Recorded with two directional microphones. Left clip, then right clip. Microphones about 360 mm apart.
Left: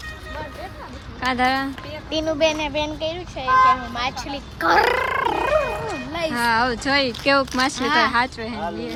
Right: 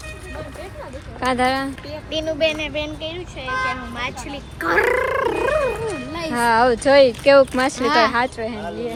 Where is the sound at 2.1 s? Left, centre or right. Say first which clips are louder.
Even; left.